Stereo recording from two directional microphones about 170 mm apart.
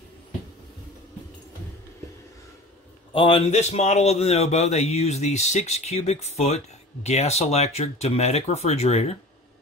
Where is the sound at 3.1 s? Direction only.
30° left (ahead or behind).